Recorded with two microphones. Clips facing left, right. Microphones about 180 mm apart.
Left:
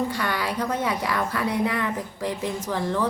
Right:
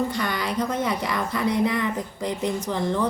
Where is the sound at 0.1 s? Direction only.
5° left (ahead or behind).